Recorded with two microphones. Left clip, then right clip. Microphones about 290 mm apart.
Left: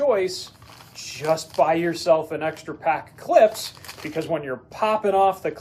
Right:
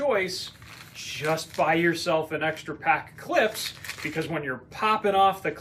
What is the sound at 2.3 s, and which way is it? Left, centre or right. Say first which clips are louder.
Speech: left 1 dB; centre.